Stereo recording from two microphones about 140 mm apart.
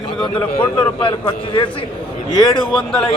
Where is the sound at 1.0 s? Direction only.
40° left (ahead or behind).